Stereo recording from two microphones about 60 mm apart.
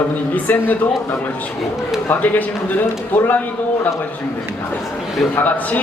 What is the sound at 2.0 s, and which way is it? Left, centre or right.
Speech, left.